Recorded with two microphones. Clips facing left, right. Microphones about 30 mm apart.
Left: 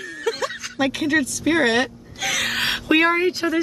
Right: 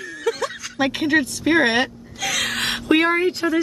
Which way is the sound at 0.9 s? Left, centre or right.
Right.